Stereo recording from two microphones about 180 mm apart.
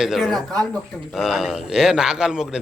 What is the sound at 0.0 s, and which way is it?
Speech, centre (ahead or behind).